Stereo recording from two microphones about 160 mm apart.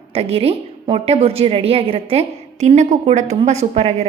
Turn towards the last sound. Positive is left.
turn(degrees=-40)  # may be behind; listen again after turning